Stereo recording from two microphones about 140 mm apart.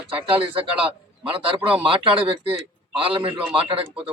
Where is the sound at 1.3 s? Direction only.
10° right (ahead or behind).